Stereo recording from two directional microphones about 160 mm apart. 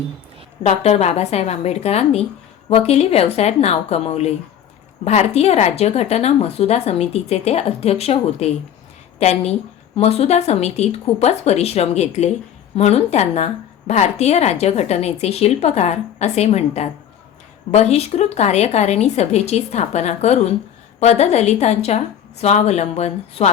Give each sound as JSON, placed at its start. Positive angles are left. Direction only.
{"t": 0.6, "sound": "a woman's voice", "side_deg": 45}